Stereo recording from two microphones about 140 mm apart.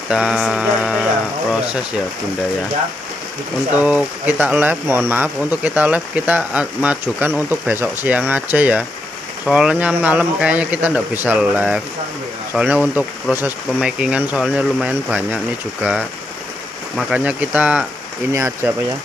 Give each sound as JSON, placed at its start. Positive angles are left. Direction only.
{"t": 0.1, "sound": "a sound", "side_deg": -5}
{"t": 3.7, "sound": "speech", "side_deg": -10}
{"t": 18.3, "sound": "speech", "side_deg": -20}